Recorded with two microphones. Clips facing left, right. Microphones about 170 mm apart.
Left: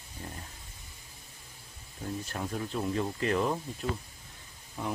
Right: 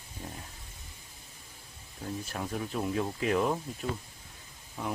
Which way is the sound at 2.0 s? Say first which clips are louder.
Even; centre (ahead or behind).